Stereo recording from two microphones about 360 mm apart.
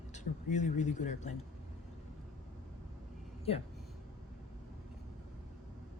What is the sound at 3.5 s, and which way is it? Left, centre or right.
Speech, centre.